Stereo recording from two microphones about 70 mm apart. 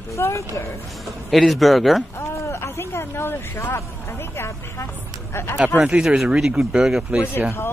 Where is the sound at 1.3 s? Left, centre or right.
Centre.